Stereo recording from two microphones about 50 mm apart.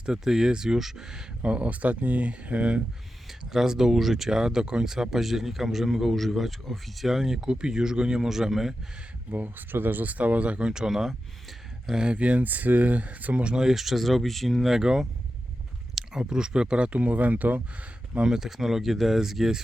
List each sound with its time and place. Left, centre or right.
0.0 s speech: centre
1.4 s speech: right
3.5 s speech: centre
9.3 s speech: right; by 10.8 s centre
10.8 s speech: centre
13.7 s speech: centre; by 17.6 s right
18.2 s speech: centre